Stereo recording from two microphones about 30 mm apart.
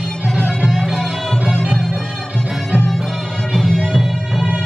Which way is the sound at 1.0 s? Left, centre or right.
Centre.